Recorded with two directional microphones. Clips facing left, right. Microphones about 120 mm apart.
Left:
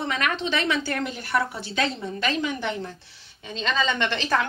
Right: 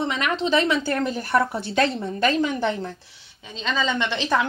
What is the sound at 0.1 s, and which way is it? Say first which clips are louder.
A woman's voice: right 2 dB; 25° right (ahead or behind).